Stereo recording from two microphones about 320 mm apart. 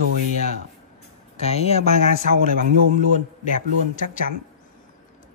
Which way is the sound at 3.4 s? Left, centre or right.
Left.